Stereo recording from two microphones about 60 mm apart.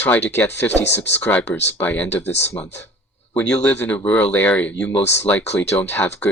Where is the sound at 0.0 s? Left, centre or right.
Left.